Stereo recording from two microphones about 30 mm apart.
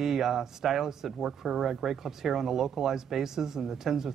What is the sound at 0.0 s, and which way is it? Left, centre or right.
Speech, centre.